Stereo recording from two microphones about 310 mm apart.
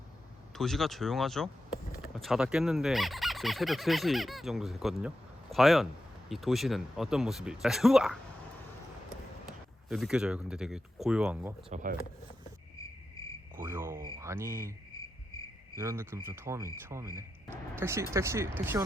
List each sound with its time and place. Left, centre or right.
0.5 s speech: centre
9.5 s speech: centre
11.7 s speech: right
13.6 s cricket: centre
15.7 s speech: centre